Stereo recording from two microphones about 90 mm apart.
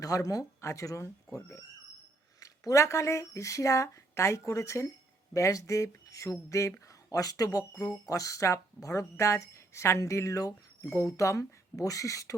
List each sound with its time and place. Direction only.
0.0 s speech: 40° left (ahead or behind)
2.4 s speech: 35° left (ahead or behind)